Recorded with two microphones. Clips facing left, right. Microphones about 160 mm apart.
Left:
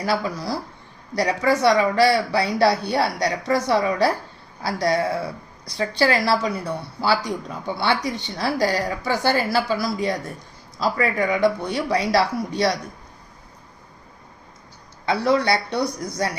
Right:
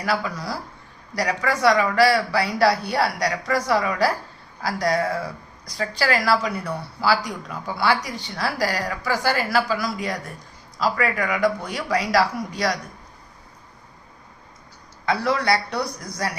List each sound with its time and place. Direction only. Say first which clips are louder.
0.0 s a woman's voice: left 2 dB; 30° left (ahead or behind)
15.0 s a woman's voice: left 2 dB; 25° left (ahead or behind)